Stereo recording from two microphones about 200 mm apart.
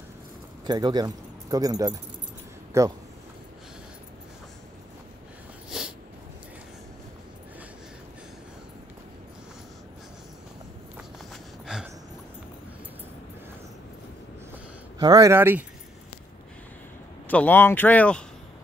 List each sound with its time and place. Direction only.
0.7 s speech: 20° right (ahead or behind)
5.7 s snort: centre (ahead or behind)
11.6 s a sound: 5° right (ahead or behind)
15.0 s speech: 20° right (ahead or behind)
17.3 s speech: 10° left (ahead or behind)